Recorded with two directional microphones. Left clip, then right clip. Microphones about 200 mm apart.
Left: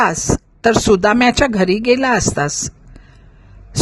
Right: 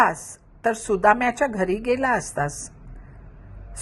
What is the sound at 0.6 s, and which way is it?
Speech, 65° left (ahead or behind).